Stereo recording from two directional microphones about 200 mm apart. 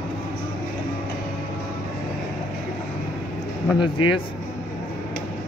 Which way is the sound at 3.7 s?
25° left (ahead or behind).